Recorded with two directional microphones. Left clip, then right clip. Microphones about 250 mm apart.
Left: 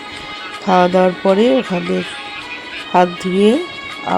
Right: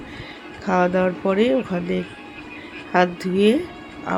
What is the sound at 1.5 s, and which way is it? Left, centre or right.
Speech, left.